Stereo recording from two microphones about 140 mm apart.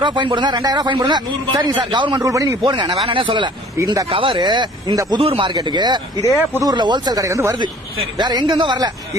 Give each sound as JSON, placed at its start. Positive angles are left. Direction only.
{"t": 0.0, "sound": "a man's voice", "side_deg": -35}
{"t": 3.8, "sound": "speech", "side_deg": -25}
{"t": 4.1, "sound": "a man's voice", "side_deg": -35}